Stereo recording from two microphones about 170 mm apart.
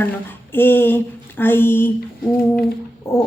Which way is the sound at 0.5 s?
10° left (ahead or behind).